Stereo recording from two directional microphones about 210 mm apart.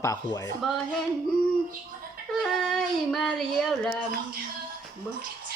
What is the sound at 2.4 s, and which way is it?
Speech, centre (ahead or behind).